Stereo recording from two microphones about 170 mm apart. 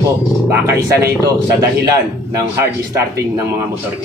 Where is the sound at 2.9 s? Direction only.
20° right (ahead or behind).